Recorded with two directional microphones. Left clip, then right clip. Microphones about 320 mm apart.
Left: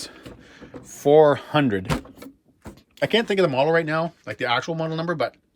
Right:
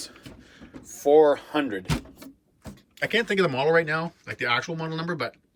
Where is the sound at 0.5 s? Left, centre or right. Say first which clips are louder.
Left 2 dB; left.